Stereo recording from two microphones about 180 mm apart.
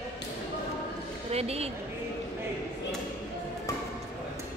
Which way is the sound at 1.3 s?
35° right (ahead or behind).